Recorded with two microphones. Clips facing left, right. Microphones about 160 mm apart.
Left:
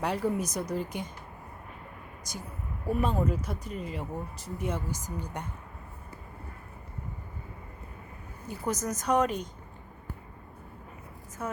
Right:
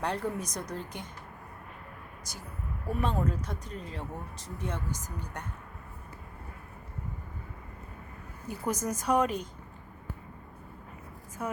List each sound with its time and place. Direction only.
0.0 s speech: 5° left (ahead or behind)
2.3 s speech: 15° left (ahead or behind)
2.9 s speech: 5° left (ahead or behind)
8.4 s a woman's voice: 10° right (ahead or behind)
11.4 s a woman's voice: 10° right (ahead or behind)